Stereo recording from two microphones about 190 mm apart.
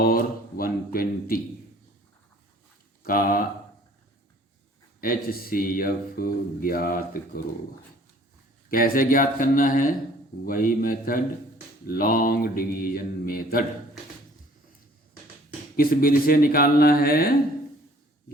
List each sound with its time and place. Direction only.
0.0 s speech: 50° left (ahead or behind)
3.0 s speech: 45° left (ahead or behind)
4.9 s speech: 50° left (ahead or behind)
8.7 s speech: 50° left (ahead or behind)
15.7 s speech: 50° left (ahead or behind)